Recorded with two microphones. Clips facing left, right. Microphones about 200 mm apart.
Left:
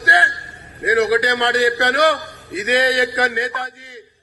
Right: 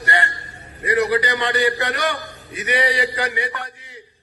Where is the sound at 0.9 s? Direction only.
75° left (ahead or behind).